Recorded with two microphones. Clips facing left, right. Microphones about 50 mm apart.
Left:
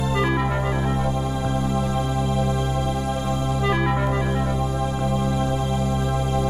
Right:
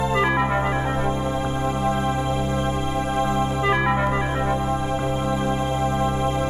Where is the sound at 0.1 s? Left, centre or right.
Right.